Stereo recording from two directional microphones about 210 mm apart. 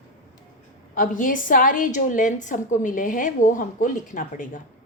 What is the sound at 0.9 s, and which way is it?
A woman's voice, 40° left (ahead or behind).